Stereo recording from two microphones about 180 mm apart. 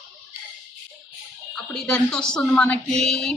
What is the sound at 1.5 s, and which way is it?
A woman's voice, centre (ahead or behind).